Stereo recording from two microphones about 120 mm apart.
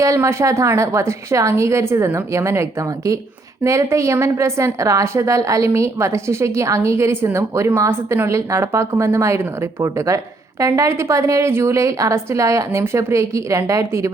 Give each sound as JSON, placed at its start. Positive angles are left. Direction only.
{"t": 0.0, "sound": "a woman's voice", "side_deg": -25}